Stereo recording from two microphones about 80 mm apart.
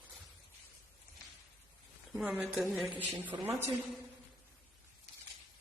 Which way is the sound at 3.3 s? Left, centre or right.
Right.